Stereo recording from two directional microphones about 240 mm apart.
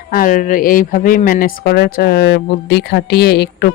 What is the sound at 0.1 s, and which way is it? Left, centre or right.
Speech, left.